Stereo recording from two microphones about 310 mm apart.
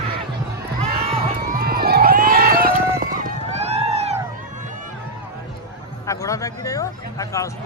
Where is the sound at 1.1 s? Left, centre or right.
Centre.